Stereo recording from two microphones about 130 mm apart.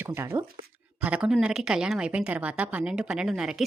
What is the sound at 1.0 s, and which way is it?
Speech, 10° right (ahead or behind).